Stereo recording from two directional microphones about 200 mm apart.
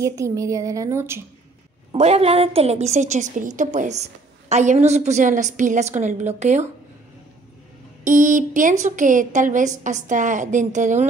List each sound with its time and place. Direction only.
0.0 s speech: 15° right (ahead or behind)
1.9 s a woman's voice: 30° right (ahead or behind)
8.0 s a woman's voice: 40° right (ahead or behind)